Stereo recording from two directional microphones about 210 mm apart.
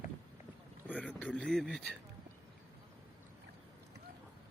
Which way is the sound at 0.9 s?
5° left (ahead or behind).